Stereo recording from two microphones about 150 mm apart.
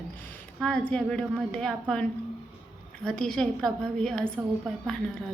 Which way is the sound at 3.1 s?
5° left (ahead or behind).